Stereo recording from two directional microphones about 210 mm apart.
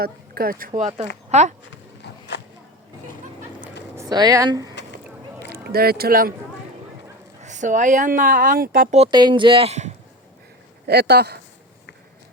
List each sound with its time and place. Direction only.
0.0 s speech: 45° right (ahead or behind)
2.0 s walk: 50° left (ahead or behind)
3.9 s speech: 15° right (ahead or behind)
4.7 s a sound: 55° left (ahead or behind)
5.5 s speech: 45° right (ahead or behind)
7.4 s speech: 35° right (ahead or behind)
9.0 s speech: 20° right (ahead or behind)
10.8 s speech: 50° right (ahead or behind)